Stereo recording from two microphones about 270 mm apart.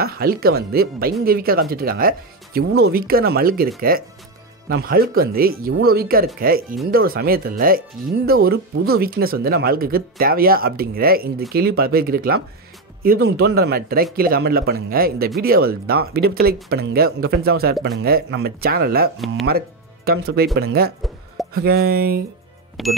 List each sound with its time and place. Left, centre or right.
0.0 s speech: right
19.1 s speech: centre
20.1 s speech: right
22.8 s speech: centre